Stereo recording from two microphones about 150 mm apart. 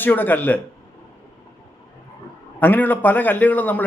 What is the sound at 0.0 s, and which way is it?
Speech, 15° left (ahead or behind).